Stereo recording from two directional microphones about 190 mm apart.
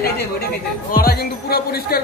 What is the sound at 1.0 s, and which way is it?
Music, 50° left (ahead or behind).